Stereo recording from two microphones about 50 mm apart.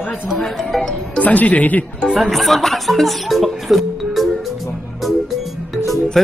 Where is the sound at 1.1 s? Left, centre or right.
Left.